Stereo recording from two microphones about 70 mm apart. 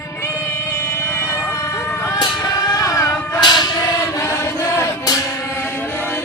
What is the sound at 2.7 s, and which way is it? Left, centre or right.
Music, left.